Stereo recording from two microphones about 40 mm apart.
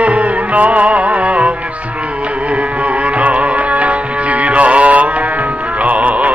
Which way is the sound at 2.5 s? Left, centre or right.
Right.